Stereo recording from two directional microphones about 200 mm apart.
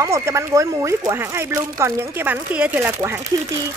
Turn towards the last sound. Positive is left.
turn(degrees=-10)  # may be behind; listen again after turning